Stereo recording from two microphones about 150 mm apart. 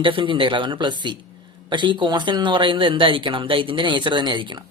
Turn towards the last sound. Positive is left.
turn(degrees=-30)  # may be behind; listen again after turning